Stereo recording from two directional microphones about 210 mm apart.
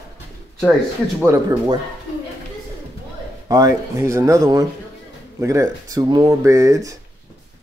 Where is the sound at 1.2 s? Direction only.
15° right (ahead or behind).